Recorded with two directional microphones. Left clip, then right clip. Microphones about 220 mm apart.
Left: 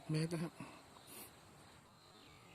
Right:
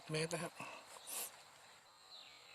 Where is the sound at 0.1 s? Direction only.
35° right (ahead or behind).